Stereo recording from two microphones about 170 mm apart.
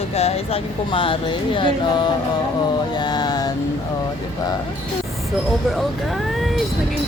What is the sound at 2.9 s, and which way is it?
Mantra, 25° left (ahead or behind).